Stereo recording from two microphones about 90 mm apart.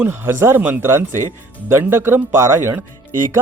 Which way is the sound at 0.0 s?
25° right (ahead or behind).